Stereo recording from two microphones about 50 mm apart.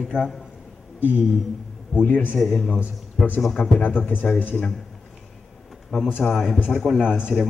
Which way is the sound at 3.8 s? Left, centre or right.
Left.